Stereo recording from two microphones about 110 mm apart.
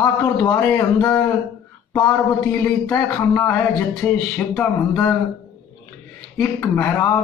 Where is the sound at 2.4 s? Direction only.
20° left (ahead or behind).